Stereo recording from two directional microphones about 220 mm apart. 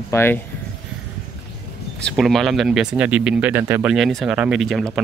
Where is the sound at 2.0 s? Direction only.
Centre (ahead or behind).